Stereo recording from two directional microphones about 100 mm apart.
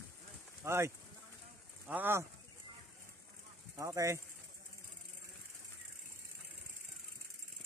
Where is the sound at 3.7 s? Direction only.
30° right (ahead or behind).